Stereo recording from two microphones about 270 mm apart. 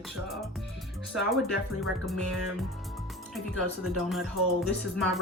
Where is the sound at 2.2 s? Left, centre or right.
Right.